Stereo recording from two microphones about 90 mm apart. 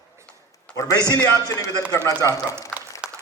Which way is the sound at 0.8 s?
45° left (ahead or behind).